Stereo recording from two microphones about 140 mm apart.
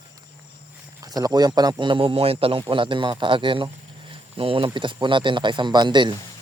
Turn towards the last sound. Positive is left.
turn(degrees=-35)  # may be behind; listen again after turning